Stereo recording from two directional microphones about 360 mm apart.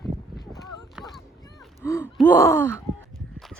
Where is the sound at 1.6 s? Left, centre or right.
Centre.